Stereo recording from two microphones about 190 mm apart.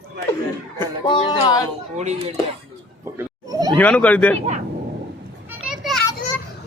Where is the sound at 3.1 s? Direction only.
20° right (ahead or behind).